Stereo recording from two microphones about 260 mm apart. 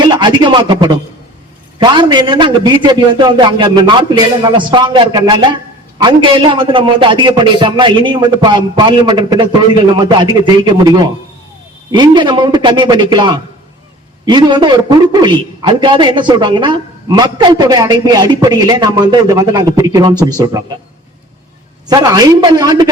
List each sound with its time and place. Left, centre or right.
0.0 s a sound: centre
1.8 s a man's voice: centre
21.8 s a man's voice: centre